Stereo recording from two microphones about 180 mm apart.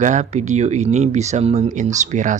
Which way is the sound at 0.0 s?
40° right (ahead or behind).